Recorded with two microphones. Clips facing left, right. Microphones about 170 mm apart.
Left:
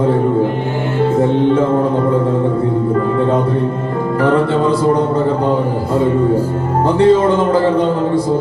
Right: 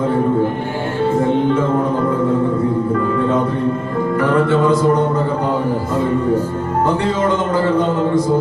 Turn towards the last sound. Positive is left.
turn(degrees=30)  # may be behind; listen again after turning